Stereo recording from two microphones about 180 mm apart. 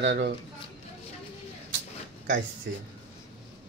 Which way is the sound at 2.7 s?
70° right (ahead or behind).